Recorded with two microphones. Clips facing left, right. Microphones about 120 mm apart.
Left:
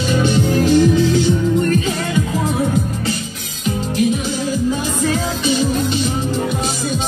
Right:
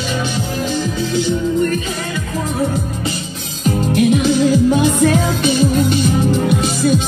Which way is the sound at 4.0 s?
70° right (ahead or behind).